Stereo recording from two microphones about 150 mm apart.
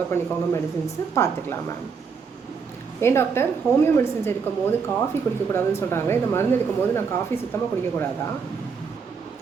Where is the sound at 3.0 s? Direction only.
15° left (ahead or behind).